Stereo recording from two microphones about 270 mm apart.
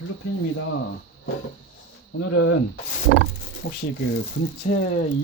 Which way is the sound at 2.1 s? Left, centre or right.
Left.